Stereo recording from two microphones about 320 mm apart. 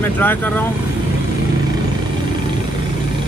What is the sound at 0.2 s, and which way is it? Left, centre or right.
Speech, centre.